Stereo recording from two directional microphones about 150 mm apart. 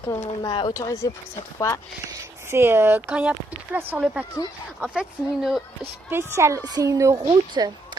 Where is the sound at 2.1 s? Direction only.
15° right (ahead or behind).